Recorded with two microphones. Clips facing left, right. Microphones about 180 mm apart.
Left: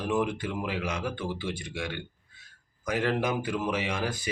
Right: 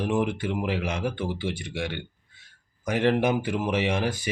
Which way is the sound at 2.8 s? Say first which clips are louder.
Right 5 dB; 25° right (ahead or behind).